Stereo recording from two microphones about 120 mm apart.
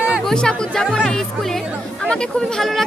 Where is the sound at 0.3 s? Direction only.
5° left (ahead or behind).